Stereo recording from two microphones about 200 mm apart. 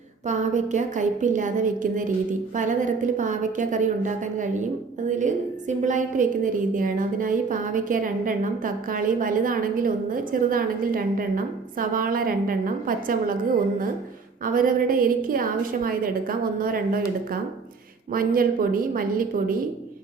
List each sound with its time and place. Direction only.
0.3 s a woman's voice: 35° right (ahead or behind)
14.4 s a woman's voice: 45° right (ahead or behind)
18.1 s a woman's voice: 45° right (ahead or behind)